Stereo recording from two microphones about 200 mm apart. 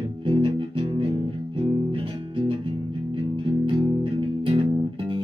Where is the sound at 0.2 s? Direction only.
25° right (ahead or behind).